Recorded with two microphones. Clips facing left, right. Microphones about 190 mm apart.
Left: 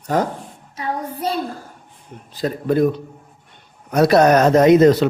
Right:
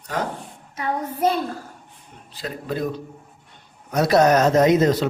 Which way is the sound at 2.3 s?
40° left (ahead or behind).